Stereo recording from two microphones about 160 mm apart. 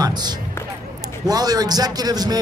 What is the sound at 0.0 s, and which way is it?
Music, 25° right (ahead or behind).